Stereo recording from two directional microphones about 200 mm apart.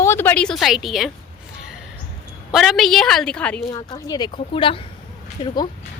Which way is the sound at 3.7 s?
20° left (ahead or behind).